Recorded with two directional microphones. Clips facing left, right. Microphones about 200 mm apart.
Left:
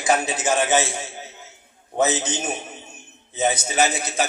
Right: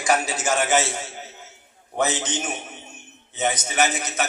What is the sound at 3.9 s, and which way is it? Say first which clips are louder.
Speech: left 2 dB; 30° left (ahead or behind).